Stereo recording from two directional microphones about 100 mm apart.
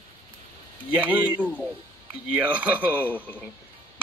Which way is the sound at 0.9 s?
15° right (ahead or behind).